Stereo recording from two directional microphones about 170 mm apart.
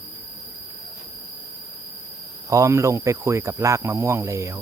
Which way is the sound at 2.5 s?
20° right (ahead or behind).